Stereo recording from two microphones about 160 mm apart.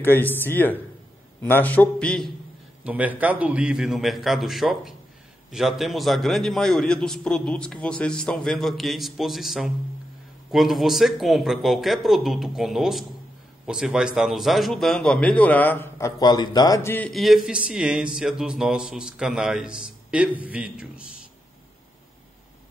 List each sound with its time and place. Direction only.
0.0 s a man's voice: 10° left (ahead or behind)
2.8 s a man's voice: 10° right (ahead or behind); by 16.1 s 10° left (ahead or behind)
16.2 s speech: 25° left (ahead or behind)
17.1 s a man's voice: centre (ahead or behind)